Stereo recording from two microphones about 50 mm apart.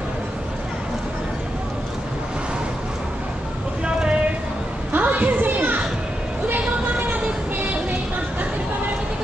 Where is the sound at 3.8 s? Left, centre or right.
Centre.